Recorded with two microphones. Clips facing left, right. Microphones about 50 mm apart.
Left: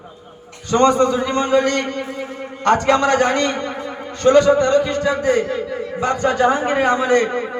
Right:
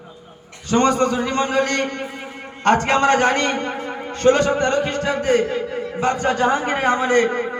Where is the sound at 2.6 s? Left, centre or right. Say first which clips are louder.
Left 1 dB; right.